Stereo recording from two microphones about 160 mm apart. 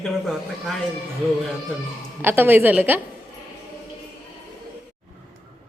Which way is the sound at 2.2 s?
15° right (ahead or behind).